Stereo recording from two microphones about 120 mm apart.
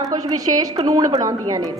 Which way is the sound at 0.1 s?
30° right (ahead or behind).